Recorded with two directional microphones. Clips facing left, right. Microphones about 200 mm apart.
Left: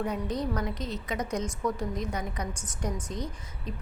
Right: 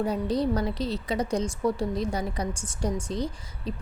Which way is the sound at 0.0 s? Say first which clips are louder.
Right 5 dB; 30° right (ahead or behind).